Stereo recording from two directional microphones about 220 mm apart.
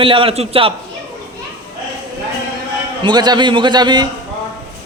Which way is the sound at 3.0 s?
20° right (ahead or behind).